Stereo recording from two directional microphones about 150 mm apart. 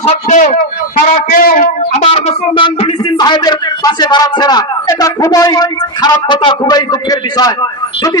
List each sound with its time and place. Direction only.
0.0 s speech: 55° left (ahead or behind)
1.1 s a man's voice: 70° left (ahead or behind)
1.9 s speech: 45° left (ahead or behind); by 7.5 s 25° left (ahead or behind)